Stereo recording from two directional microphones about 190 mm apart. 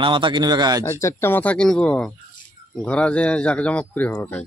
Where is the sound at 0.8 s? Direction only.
15° left (ahead or behind).